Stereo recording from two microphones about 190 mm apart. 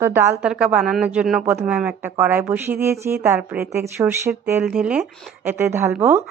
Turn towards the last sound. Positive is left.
turn(degrees=-15)  # may be behind; listen again after turning